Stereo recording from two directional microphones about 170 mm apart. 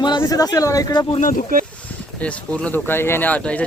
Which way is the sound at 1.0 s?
40° left (ahead or behind).